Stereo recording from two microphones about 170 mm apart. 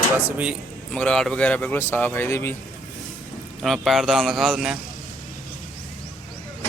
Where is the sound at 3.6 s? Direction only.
Centre (ahead or behind).